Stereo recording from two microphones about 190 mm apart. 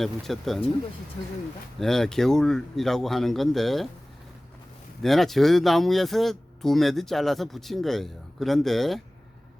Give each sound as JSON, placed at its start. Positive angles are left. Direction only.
{"t": 0.0, "sound": "speech", "side_deg": 0}
{"t": 1.2, "sound": "speech", "side_deg": 25}
{"t": 1.8, "sound": "speech", "side_deg": 0}
{"t": 5.0, "sound": "speech", "side_deg": 0}